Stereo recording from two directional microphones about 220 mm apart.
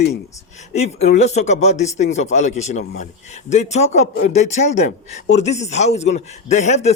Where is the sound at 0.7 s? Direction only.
30° left (ahead or behind).